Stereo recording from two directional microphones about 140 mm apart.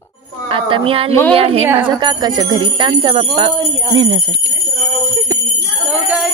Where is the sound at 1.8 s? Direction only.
30° right (ahead or behind).